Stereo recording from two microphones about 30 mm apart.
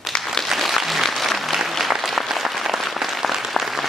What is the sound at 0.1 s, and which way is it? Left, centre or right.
Applause, left.